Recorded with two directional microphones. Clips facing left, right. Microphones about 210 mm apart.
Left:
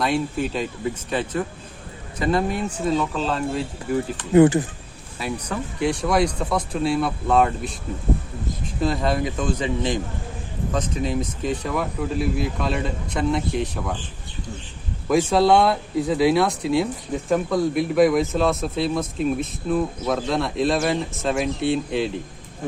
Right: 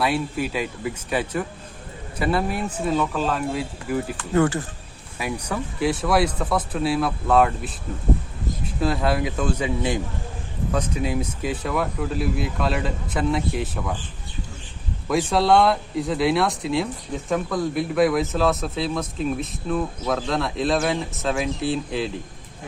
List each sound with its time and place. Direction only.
0.0 s speech: 5° right (ahead or behind)
4.2 s speech: 15° left (ahead or behind)
5.2 s speech: 5° right (ahead or behind)
8.8 s speech: 5° right (ahead or behind)
15.3 s speech: centre (ahead or behind)